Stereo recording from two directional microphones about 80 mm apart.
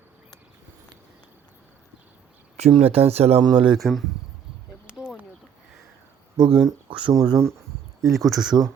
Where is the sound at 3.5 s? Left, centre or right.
Right.